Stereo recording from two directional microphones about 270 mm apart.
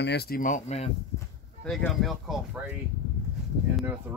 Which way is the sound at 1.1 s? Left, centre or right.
Centre.